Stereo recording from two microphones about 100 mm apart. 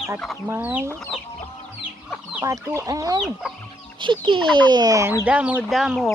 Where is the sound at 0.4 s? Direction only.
20° right (ahead or behind).